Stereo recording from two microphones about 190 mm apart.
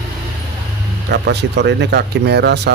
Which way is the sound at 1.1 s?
60° right (ahead or behind).